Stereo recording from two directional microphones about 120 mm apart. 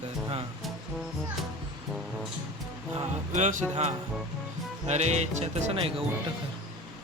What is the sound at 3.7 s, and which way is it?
Speech, 60° right (ahead or behind).